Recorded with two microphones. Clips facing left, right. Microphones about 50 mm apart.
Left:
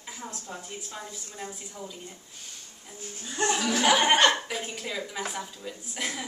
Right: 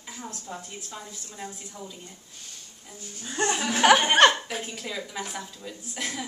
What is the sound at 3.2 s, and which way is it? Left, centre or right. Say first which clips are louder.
Speech: even; right.